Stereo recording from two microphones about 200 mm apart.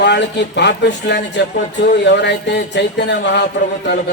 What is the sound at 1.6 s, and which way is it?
Speech, 40° left (ahead or behind).